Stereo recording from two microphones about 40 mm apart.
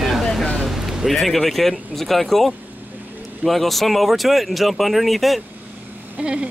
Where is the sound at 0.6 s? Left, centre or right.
Centre.